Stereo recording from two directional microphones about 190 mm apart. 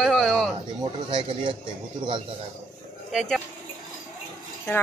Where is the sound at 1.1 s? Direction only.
25° right (ahead or behind).